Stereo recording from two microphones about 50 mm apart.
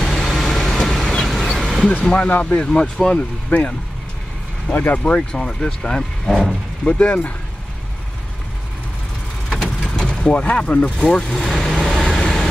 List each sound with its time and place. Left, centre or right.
0.0 s vehicle: centre
2.2 s speech: left
2.6 s speech: centre
3.2 s speech: left
5.0 s speech: centre
6.2 s speech: centre
6.8 s speech: left
9.5 s vehicle: centre
10.3 s speech: left
11.3 s vehicle: centre